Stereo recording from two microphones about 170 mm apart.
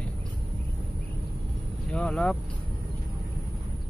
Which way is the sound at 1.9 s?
5° left (ahead or behind).